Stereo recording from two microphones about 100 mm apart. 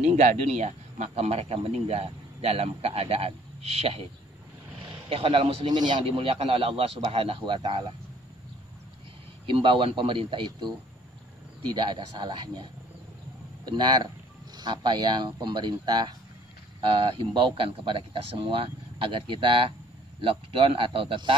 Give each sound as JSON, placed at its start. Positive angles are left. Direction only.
{"t": 0.7, "sound": "a man's voice", "side_deg": -90}
{"t": 5.1, "sound": "a man's voice", "side_deg": -65}
{"t": 5.7, "sound": "speech", "side_deg": -45}
{"t": 6.0, "sound": "a man's voice", "side_deg": -70}
{"t": 9.5, "sound": "speech", "side_deg": -60}
{"t": 11.7, "sound": "speech", "side_deg": -45}
{"t": 13.7, "sound": "speech", "side_deg": -45}